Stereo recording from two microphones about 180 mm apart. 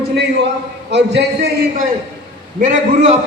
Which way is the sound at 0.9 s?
70° right (ahead or behind).